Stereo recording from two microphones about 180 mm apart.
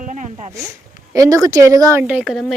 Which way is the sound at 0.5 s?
15° right (ahead or behind).